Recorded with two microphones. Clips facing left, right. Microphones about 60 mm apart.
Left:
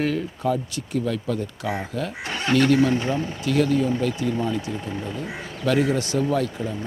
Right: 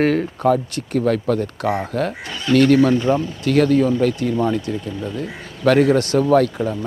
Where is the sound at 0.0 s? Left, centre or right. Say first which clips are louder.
Right 7 dB; right.